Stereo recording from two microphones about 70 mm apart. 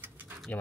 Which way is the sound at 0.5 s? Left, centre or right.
Left.